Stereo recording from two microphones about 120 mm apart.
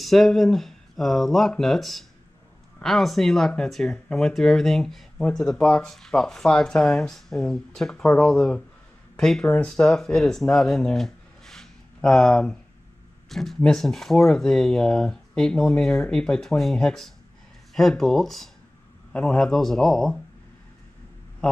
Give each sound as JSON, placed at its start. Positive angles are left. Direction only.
{"t": 0.0, "sound": "speech", "side_deg": 0}